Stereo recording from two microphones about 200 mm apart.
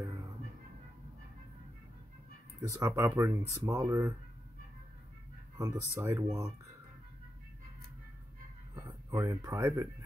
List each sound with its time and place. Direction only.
2.8 s speech: 10° right (ahead or behind)
5.6 s speech: 15° right (ahead or behind)
8.7 s speech: 15° right (ahead or behind)